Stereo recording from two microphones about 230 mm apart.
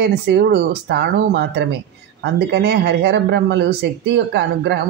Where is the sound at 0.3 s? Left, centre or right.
Right.